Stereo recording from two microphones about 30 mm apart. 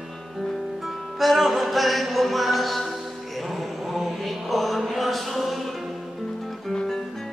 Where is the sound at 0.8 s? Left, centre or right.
Centre.